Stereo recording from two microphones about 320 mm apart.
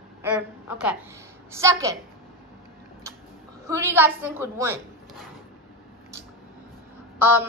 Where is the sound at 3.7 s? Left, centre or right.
Centre.